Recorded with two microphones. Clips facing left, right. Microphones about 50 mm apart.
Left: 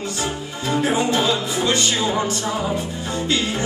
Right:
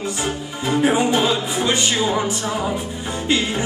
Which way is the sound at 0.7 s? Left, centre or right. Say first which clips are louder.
Right 2 dB; centre.